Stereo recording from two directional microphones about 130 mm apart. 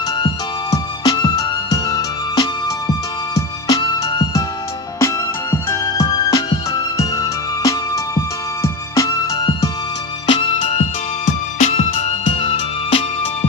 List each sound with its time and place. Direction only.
0.2 s music: 30° left (ahead or behind)
10.2 s music: 40° left (ahead or behind)
11.5 s music: 65° left (ahead or behind)